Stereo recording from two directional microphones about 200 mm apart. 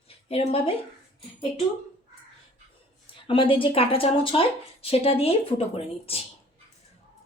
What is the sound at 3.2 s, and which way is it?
Speech, 25° left (ahead or behind).